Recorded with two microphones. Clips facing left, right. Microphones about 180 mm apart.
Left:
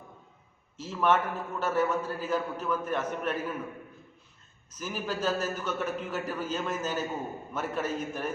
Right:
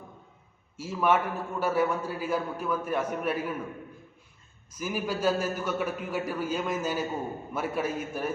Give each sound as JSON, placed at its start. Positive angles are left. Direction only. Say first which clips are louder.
{"t": 0.8, "sound": "a man's voice", "louder": "right 1 dB", "side_deg": -10}
{"t": 4.7, "sound": "a man's voice", "louder": "right 3 dB", "side_deg": -10}